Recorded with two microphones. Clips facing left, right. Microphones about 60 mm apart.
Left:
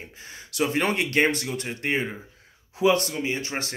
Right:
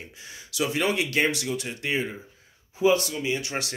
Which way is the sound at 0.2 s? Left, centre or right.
Left.